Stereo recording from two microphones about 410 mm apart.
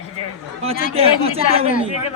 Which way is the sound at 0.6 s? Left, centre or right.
Centre.